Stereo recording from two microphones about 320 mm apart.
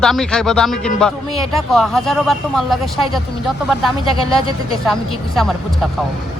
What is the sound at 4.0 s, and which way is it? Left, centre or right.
Speech, centre.